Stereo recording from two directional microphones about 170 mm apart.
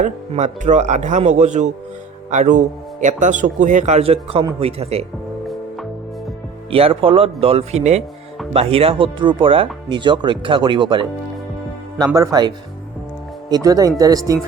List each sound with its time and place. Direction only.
0.0 s speech: 45° right (ahead or behind)
6.7 s speech: 35° right (ahead or behind)